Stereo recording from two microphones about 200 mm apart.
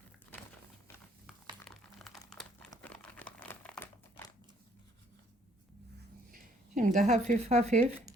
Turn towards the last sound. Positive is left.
turn(degrees=-35)  # may be behind; listen again after turning